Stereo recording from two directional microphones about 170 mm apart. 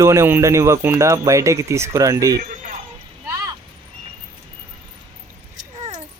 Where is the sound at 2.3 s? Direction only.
55° right (ahead or behind).